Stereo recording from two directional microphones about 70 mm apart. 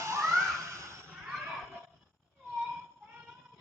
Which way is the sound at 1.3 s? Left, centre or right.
Centre.